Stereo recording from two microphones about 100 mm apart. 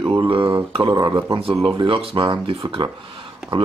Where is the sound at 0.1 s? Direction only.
60° right (ahead or behind).